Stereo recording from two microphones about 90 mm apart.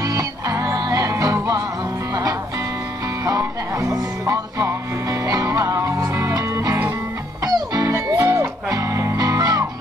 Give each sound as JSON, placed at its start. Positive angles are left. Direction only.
{"t": 0.1, "sound": "music", "side_deg": -40}
{"t": 3.3, "sound": "music", "side_deg": -40}